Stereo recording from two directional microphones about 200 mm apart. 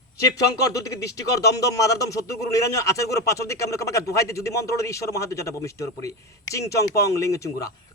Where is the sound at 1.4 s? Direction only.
15° left (ahead or behind).